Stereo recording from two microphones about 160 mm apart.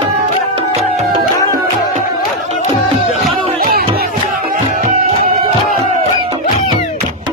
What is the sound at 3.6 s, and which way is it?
Music, 65° right (ahead or behind).